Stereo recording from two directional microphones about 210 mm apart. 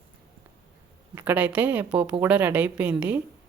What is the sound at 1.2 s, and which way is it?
A woman's voice, 5° right (ahead or behind).